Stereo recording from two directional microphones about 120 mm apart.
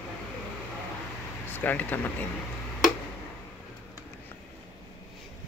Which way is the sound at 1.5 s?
15° left (ahead or behind).